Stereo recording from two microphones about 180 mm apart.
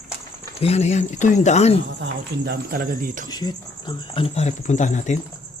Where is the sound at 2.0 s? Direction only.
65° right (ahead or behind); by 3.3 s 50° right (ahead or behind).